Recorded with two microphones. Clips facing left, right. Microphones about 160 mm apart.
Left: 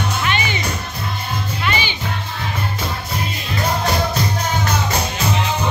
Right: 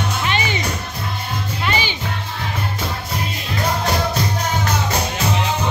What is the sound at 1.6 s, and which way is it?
Music, 35° right (ahead or behind).